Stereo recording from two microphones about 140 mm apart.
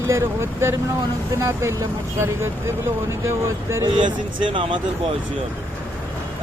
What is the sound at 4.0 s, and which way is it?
Speech, 35° right (ahead or behind).